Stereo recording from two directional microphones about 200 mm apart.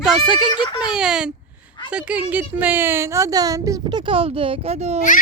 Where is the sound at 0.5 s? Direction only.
25° left (ahead or behind).